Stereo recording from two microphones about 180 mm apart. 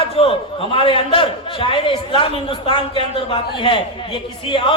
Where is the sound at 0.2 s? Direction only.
30° left (ahead or behind).